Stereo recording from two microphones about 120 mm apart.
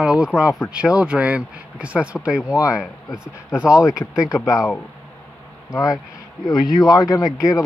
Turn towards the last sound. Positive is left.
turn(degrees=30)  # may be behind; listen again after turning